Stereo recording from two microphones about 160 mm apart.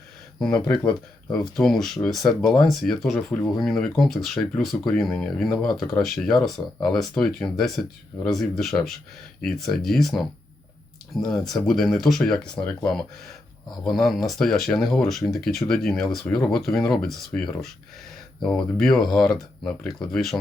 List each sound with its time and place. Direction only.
0.5 s speech: 25° left (ahead or behind)
0.9 s speech: 5° left (ahead or behind)